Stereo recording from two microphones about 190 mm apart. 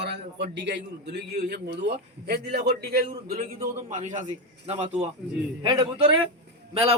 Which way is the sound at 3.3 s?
45° right (ahead or behind).